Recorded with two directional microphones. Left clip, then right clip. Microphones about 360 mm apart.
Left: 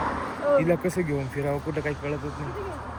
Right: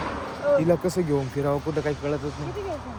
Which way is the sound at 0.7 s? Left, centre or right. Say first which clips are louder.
Right 2 dB; centre.